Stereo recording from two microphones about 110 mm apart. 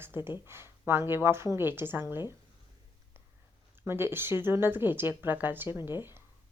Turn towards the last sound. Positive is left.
turn(degrees=-20)  # may be behind; listen again after turning